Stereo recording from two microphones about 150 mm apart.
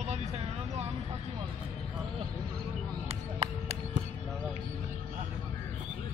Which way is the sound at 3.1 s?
45° right (ahead or behind).